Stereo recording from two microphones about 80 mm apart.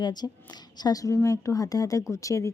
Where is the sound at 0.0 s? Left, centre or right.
Left.